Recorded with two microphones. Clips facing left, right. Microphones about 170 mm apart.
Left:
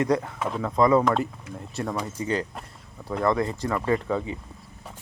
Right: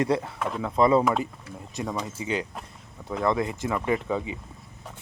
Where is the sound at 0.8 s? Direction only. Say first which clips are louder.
Left 1 dB; 25° right (ahead or behind).